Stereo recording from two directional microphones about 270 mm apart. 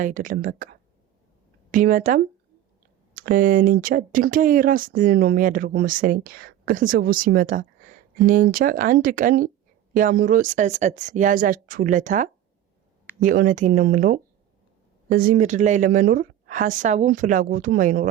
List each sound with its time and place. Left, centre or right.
0.0 s a woman's voice: right